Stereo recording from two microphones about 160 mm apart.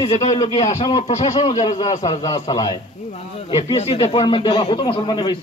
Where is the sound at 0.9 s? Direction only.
40° left (ahead or behind).